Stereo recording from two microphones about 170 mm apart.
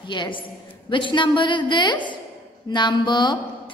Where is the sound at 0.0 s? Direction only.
25° left (ahead or behind).